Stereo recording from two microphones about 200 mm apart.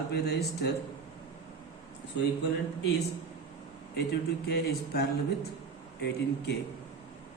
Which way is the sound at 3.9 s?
55° left (ahead or behind).